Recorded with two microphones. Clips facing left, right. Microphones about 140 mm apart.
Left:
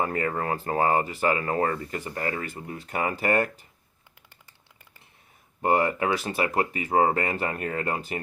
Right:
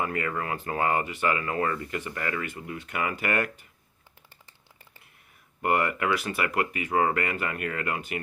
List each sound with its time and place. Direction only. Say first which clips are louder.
0.0 s speech: left 3 dB; 35° left (ahead or behind)
5.6 s speech: left 2 dB; 30° left (ahead or behind)